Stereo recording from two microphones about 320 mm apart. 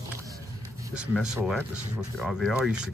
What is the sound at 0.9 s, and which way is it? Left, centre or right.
Speech, centre.